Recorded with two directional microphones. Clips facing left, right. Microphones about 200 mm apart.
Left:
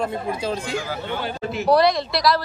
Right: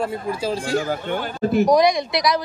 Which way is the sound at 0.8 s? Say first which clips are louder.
Right 3 dB; 50° right (ahead or behind).